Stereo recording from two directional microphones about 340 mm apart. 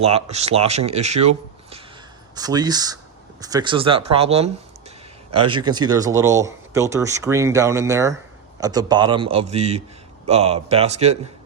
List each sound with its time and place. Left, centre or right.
0.0 s a man's voice: centre